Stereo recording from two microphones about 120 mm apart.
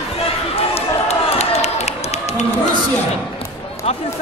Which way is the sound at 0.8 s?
65° left (ahead or behind).